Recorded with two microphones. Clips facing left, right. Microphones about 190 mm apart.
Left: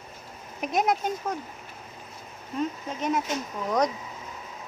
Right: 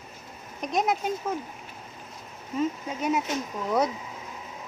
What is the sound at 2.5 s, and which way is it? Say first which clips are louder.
Speech: right 2 dB; 10° right (ahead or behind).